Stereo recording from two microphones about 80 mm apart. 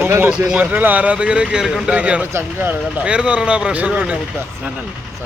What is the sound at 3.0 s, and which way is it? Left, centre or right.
Speech, centre.